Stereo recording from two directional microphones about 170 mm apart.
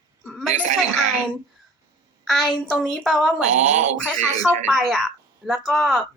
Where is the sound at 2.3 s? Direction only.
Centre (ahead or behind).